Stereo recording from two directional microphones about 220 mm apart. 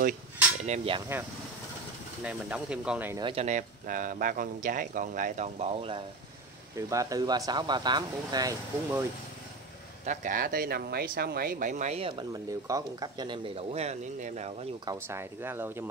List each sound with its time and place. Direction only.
0.7 s speech: 25° right (ahead or behind)
2.2 s speech: 5° right (ahead or behind)
3.2 s speech: 20° right (ahead or behind)
3.4 s speech: 35° right (ahead or behind)
6.9 s speech: 15° right (ahead or behind)
10.0 s speech: 35° right (ahead or behind)
14.9 s speech: 10° right (ahead or behind)